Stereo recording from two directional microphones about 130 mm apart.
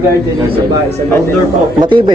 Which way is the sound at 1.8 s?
35° right (ahead or behind).